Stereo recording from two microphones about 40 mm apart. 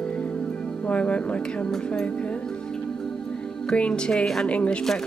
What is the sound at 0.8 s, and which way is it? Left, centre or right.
Speech, left.